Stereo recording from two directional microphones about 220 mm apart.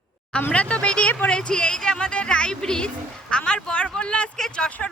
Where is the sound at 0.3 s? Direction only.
5° left (ahead or behind).